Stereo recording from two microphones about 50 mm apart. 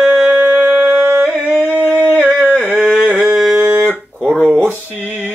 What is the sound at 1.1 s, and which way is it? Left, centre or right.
Singing, right.